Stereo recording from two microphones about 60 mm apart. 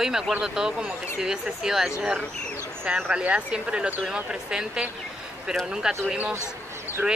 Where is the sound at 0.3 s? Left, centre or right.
Centre.